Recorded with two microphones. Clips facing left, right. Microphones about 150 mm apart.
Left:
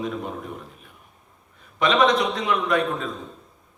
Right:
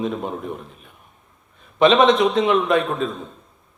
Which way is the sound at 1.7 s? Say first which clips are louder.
Right 5 dB; 25° right (ahead or behind).